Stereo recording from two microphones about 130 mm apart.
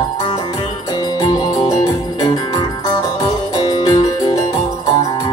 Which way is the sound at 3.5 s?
30° left (ahead or behind).